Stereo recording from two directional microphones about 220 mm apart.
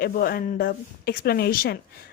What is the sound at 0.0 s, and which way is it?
A woman's voice, 40° left (ahead or behind).